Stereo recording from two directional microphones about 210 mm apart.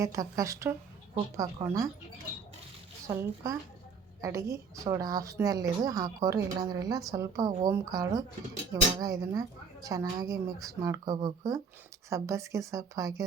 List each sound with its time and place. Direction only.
0.0 s a woman's voice: 15° right (ahead or behind)
3.1 s a woman's voice: 15° right (ahead or behind)